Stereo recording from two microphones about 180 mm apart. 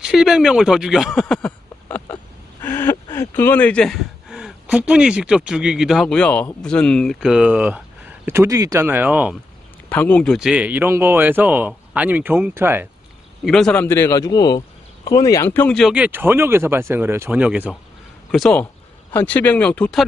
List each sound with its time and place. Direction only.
0.0 s speech: 5° right (ahead or behind)
1.2 s a sound: 5° left (ahead or behind)
2.6 s speech: 10° left (ahead or behind); by 9.4 s 10° right (ahead or behind)
9.8 s speech: 10° left (ahead or behind); by 12.8 s 10° right (ahead or behind)
13.4 s speech: centre (ahead or behind)
13.8 s a man's voice: 15° left (ahead or behind)
15.9 s speech: 10° right (ahead or behind)
18.3 s speech: 5° left (ahead or behind)